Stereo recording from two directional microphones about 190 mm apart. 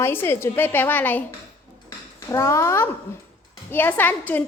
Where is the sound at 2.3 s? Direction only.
15° left (ahead or behind).